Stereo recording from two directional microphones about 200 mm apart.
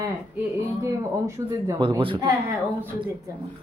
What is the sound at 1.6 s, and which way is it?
Speech, 15° right (ahead or behind).